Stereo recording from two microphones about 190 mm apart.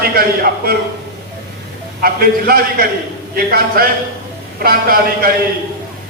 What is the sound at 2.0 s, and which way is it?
A man's voice, 50° right (ahead or behind).